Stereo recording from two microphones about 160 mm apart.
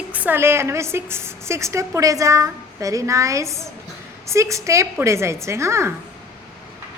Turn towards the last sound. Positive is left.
turn(degrees=-15)  # may be behind; listen again after turning